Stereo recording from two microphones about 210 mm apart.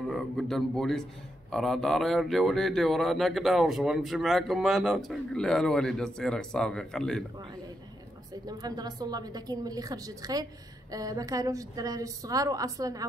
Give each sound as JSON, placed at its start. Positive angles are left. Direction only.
{"t": 0.1, "sound": "speech", "side_deg": 0}
{"t": 8.5, "sound": "a woman's voice", "side_deg": -20}